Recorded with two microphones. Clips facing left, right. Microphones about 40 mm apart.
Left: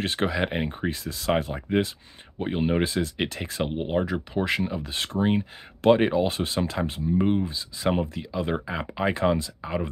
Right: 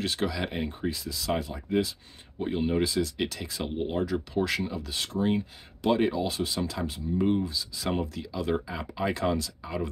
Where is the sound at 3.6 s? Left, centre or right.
Left.